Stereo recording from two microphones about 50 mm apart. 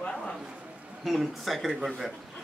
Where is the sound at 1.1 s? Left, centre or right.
Centre.